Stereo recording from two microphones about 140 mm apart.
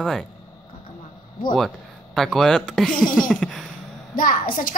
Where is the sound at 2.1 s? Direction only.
5° left (ahead or behind).